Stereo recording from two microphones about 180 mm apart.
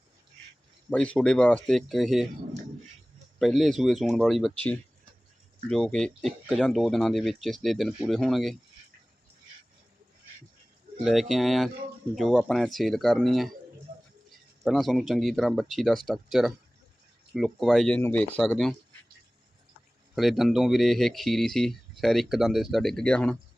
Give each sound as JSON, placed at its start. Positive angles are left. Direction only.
{"t": 0.9, "sound": "speech", "side_deg": 5}
{"t": 3.3, "sound": "speech", "side_deg": 0}
{"t": 5.6, "sound": "speech", "side_deg": 5}
{"t": 11.0, "sound": "speech", "side_deg": 0}
{"t": 14.6, "sound": "speech", "side_deg": 0}
{"t": 20.1, "sound": "speech", "side_deg": 0}